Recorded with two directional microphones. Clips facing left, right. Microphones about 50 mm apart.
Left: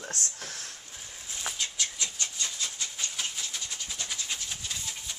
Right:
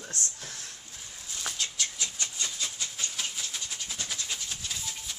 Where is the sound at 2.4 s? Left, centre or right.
Centre.